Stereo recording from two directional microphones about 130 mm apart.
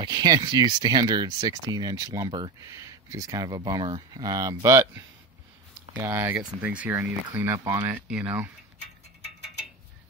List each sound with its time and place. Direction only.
0.0 s speech: 35° right (ahead or behind); by 8.5 s 10° right (ahead or behind)